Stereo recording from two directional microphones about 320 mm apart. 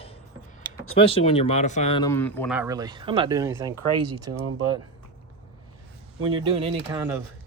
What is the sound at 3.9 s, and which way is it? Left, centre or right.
Speech, right.